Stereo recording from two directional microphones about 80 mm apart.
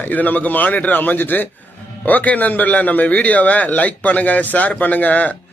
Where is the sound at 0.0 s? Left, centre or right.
Left.